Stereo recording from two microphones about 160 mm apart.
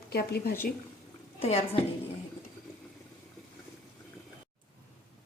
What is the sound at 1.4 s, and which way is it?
Speech, 40° left (ahead or behind).